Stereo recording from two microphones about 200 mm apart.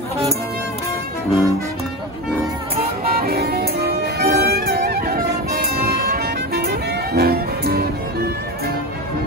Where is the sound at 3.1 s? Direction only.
50° right (ahead or behind).